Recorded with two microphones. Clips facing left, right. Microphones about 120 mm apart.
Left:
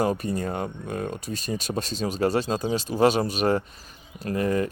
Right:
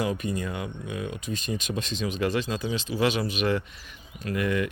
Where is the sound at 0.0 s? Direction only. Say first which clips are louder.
Left 3 dB; 40° left (ahead or behind).